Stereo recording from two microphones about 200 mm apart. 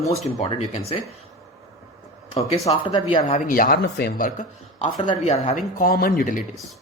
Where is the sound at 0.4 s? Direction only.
30° left (ahead or behind).